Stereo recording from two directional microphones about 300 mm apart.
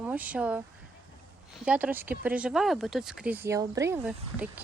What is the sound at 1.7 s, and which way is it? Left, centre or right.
Speech, centre.